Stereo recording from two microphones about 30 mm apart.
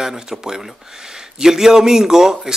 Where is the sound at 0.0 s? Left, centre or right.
Centre.